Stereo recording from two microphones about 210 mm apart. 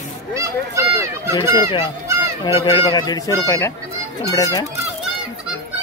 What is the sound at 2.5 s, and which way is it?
Speech, 25° left (ahead or behind).